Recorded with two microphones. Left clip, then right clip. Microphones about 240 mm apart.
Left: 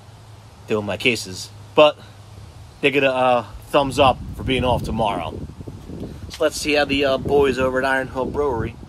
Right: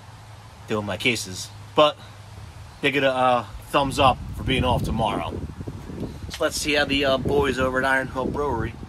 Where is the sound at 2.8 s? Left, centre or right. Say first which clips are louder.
Left 3 dB; left.